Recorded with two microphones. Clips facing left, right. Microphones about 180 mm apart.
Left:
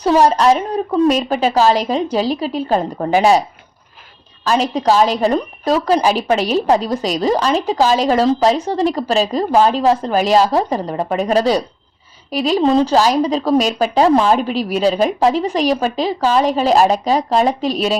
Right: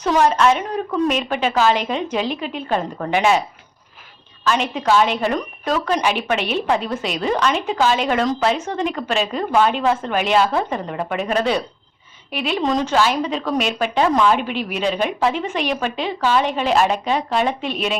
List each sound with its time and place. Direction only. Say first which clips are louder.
0.0 s speech: left 4 dB; 35° left (ahead or behind)
4.4 s speech: left 4 dB; 35° left (ahead or behind)